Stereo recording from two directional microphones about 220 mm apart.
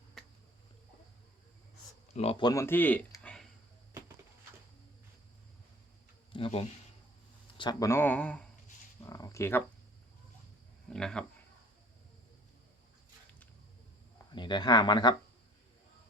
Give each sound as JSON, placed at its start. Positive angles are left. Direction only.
{"t": 2.1, "sound": "speech", "side_deg": 25}
{"t": 6.3, "sound": "a sound", "side_deg": 25}
{"t": 7.6, "sound": "speech", "side_deg": 15}
{"t": 10.8, "sound": "speech", "side_deg": 5}
{"t": 14.3, "sound": "speech", "side_deg": 20}